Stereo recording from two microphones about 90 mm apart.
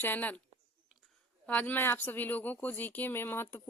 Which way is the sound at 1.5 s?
20° left (ahead or behind).